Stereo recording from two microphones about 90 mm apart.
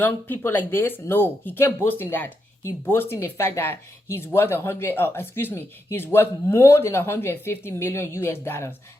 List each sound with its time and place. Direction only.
0.0 s speech: 20° left (ahead or behind)